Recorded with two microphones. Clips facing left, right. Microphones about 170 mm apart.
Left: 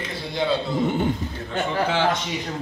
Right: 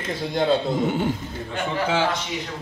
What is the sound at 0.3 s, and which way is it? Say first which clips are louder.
Speech: right 3 dB; 45° right (ahead or behind).